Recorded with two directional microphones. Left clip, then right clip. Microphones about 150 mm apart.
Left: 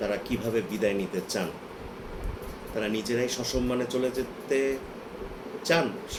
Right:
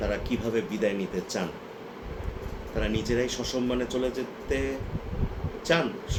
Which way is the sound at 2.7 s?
5° right (ahead or behind).